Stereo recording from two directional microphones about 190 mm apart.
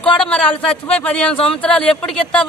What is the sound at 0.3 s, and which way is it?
A man's voice, 5° left (ahead or behind).